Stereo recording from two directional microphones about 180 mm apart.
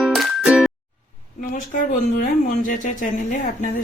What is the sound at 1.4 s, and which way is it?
Speech, 45° left (ahead or behind).